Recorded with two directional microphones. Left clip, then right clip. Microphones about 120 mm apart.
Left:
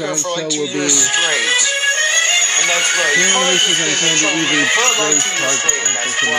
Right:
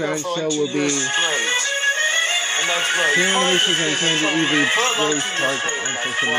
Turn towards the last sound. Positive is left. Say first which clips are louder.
# left 4 dB
turn(degrees=25)  # may be behind; listen again after turning